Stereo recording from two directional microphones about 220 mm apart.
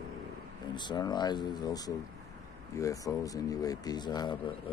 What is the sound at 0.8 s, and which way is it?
Speech, 20° left (ahead or behind).